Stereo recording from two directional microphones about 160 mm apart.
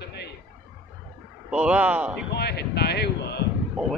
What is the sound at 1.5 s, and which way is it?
Speech, 10° right (ahead or behind).